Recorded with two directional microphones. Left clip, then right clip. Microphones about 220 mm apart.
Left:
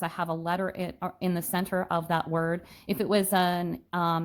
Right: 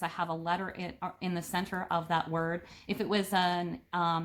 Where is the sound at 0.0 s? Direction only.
45° left (ahead or behind).